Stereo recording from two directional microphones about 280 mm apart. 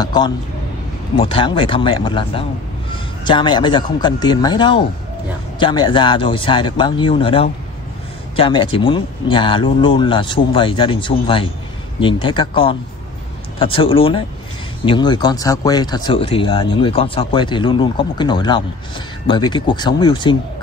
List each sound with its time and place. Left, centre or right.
0.0 s speech: centre